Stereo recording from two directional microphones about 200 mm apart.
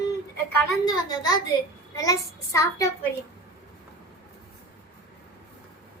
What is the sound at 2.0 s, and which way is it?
Speech, 15° left (ahead or behind).